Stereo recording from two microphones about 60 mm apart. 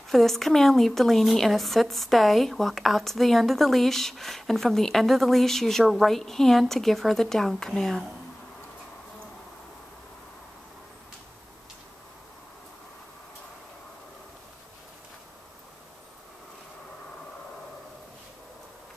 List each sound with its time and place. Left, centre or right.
0.1 s a woman's voice: centre